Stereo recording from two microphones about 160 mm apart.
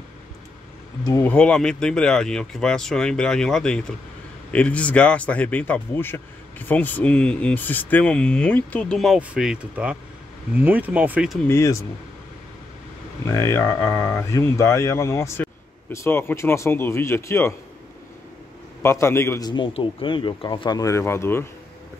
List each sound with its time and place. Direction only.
1.2 s speech: 5° left (ahead or behind); by 11.3 s 10° right (ahead or behind)
11.4 s speech: 15° left (ahead or behind)
13.3 s speech: 15° left (ahead or behind)
18.8 s speech: 15° left (ahead or behind)
19.5 s speech: 30° left (ahead or behind); by 21.5 s 15° left (ahead or behind)